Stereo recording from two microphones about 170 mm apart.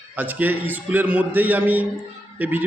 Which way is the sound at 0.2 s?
10° right (ahead or behind).